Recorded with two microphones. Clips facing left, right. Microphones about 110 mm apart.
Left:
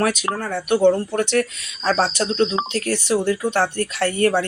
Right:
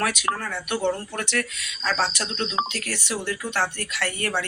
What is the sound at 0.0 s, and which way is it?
Speech, 35° left (ahead or behind).